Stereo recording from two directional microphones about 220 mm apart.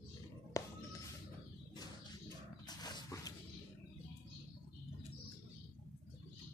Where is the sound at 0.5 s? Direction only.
15° left (ahead or behind).